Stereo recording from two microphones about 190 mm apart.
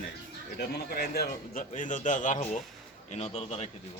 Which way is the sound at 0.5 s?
60° left (ahead or behind).